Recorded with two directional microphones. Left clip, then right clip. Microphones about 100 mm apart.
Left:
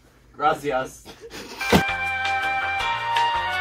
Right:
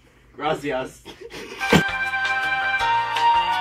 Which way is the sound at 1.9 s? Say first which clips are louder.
Right 1 dB; centre (ahead or behind).